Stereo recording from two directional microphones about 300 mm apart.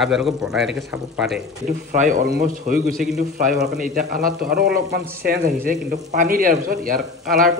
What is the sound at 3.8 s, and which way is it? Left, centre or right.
Speech, right.